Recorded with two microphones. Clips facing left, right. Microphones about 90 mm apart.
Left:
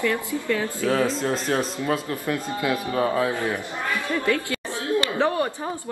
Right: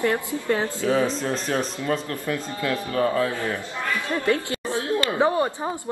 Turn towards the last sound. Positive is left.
turn(degrees=-20)  # may be behind; listen again after turning